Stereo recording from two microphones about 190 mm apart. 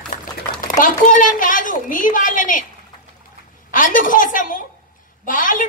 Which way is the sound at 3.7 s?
45° left (ahead or behind).